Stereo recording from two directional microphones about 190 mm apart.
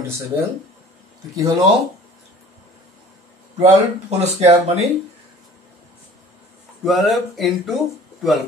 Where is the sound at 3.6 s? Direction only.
35° right (ahead or behind).